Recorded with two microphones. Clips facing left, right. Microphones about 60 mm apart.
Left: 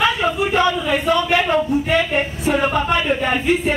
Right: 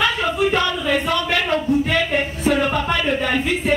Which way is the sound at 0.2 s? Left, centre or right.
Centre.